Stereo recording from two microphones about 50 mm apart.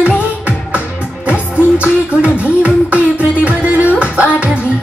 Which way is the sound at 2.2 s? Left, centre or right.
Right.